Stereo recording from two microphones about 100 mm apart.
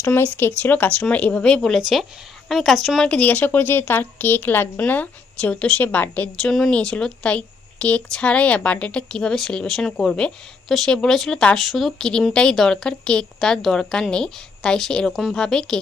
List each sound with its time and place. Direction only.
0.0 s a woman's voice: 20° left (ahead or behind); by 3.1 s centre (ahead or behind)
3.1 s a woman's voice: 15° left (ahead or behind)